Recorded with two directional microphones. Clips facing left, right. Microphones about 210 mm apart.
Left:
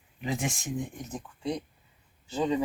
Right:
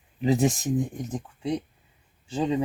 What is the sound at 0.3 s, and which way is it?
Speech, 35° right (ahead or behind).